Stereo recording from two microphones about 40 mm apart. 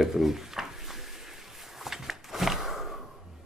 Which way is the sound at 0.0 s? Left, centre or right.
Centre.